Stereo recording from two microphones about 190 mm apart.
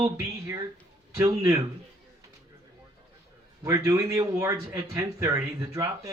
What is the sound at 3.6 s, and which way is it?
A man's voice, 15° right (ahead or behind).